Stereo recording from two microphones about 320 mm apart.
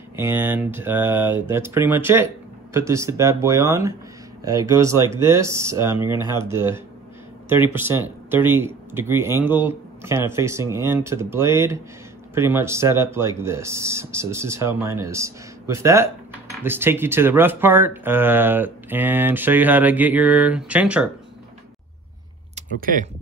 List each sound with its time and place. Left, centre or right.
0.1 s speech: centre
22.6 s speech: right